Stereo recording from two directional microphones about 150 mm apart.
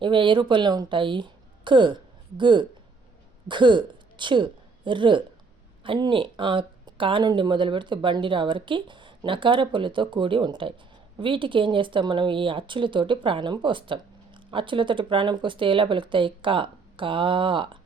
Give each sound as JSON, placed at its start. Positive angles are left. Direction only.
{"t": 0.0, "sound": "a woman's voice", "side_deg": -35}